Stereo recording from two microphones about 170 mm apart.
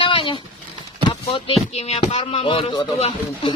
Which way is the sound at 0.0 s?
30° left (ahead or behind).